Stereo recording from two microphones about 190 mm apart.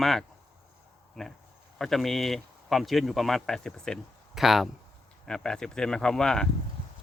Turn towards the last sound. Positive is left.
turn(degrees=5)  # may be behind; listen again after turning